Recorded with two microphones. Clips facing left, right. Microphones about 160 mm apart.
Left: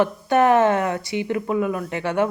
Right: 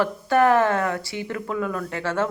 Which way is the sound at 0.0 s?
20° left (ahead or behind).